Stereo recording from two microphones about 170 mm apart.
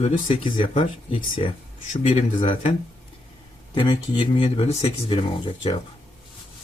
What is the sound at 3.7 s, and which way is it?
Speech, 30° left (ahead or behind).